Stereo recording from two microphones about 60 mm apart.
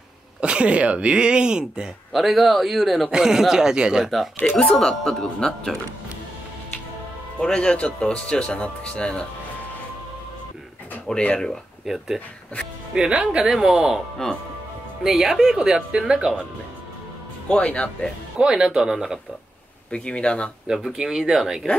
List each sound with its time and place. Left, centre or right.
0.4 s speech: centre
2.1 s a man's voice: centre
4.4 s speech: left
7.3 s speech: centre
11.1 s speech: centre
11.8 s a man's voice: centre
15.0 s speech: centre
17.5 s speech: centre
18.4 s speech: centre
19.9 s speech: centre
20.6 s speech: centre